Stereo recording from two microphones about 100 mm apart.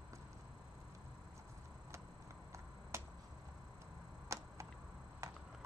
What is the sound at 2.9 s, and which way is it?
Finger snapping, 30° right (ahead or behind).